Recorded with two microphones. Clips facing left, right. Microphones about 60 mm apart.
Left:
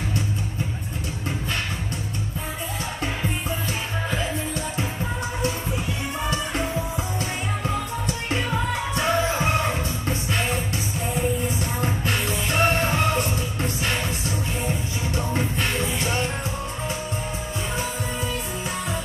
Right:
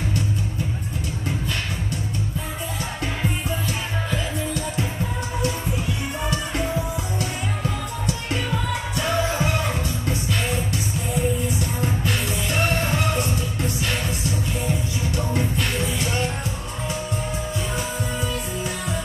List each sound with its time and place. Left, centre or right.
4.1 s music: left
7.6 s music: left
11.8 s music: left
15.0 s music: left